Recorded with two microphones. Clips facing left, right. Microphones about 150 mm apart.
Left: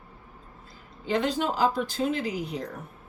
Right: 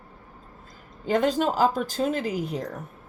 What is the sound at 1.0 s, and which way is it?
Speech, 45° right (ahead or behind).